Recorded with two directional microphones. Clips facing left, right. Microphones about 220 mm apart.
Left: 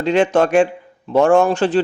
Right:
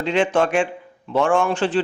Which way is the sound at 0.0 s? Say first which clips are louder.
Left 4 dB; 40° left (ahead or behind).